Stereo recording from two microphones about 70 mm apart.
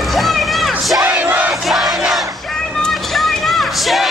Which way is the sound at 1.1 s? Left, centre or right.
Right.